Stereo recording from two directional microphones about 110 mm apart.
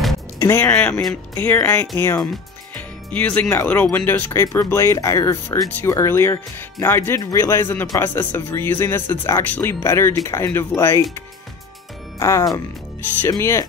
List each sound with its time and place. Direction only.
0.4 s speech: 25° left (ahead or behind)
0.7 s speech: 15° left (ahead or behind)
12.2 s speech: 25° left (ahead or behind)
13.0 s speech: 15° left (ahead or behind)
13.3 s speech: 25° left (ahead or behind)